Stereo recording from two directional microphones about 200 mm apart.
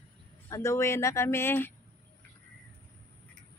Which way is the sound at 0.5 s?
15° left (ahead or behind).